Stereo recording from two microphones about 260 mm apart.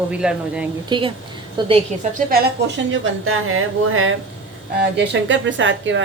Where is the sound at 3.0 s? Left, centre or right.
Right.